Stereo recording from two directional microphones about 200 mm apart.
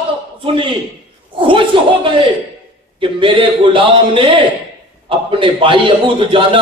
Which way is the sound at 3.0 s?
25° right (ahead or behind).